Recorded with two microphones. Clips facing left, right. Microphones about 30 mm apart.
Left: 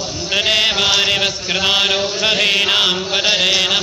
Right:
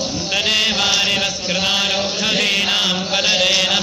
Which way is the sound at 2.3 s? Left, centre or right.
Centre.